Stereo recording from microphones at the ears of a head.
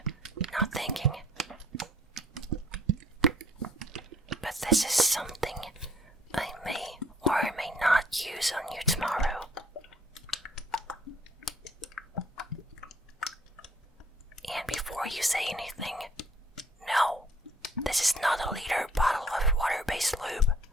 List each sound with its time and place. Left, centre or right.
0.0 s whispering: right
1.7 s typing: right
4.4 s whispering: centre
9.6 s typing: left
14.4 s whispering: centre